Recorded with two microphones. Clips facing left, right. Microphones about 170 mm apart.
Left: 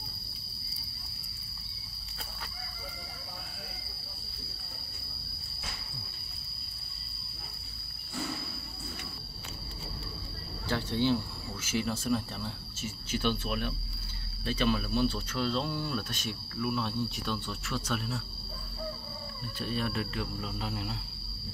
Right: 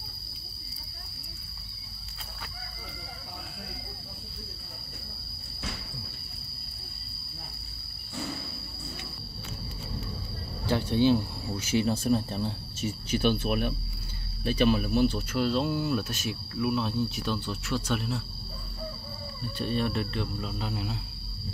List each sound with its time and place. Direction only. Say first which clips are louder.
10.7 s cricket: right 5 dB; 15° right (ahead or behind)
12.1 s speech: right 5 dB; 20° right (ahead or behind); by 18.2 s centre (ahead or behind)
19.6 s speech: right 4 dB; 5° left (ahead or behind)